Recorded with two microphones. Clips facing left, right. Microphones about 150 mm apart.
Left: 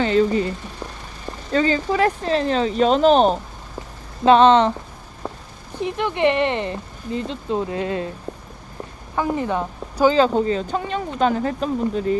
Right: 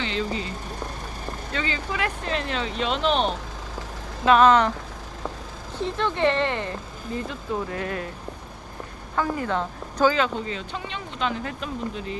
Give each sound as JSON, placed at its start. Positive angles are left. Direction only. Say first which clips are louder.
{"t": 0.0, "sound": "speech", "louder": "left 10 dB", "side_deg": 45}
{"t": 1.5, "sound": "speech", "louder": "left 11 dB", "side_deg": 40}
{"t": 4.3, "sound": "speech", "louder": "left 4 dB", "side_deg": 25}
{"t": 5.7, "sound": "speech", "louder": "left 3 dB", "side_deg": 15}
{"t": 9.1, "sound": "speech", "louder": "left 3 dB", "side_deg": 20}
{"t": 10.2, "sound": "speech", "louder": "left 9 dB", "side_deg": 35}